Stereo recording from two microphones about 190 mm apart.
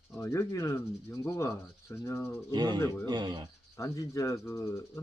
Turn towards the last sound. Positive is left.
turn(degrees=15)  # may be behind; listen again after turning